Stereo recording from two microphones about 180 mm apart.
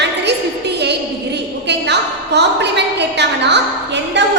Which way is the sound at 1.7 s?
70° right (ahead or behind).